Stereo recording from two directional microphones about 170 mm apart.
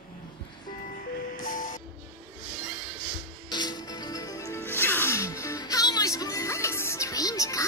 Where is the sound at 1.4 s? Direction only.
55° left (ahead or behind).